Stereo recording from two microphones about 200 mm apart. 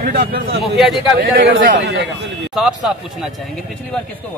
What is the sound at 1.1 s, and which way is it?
Speech, 45° right (ahead or behind).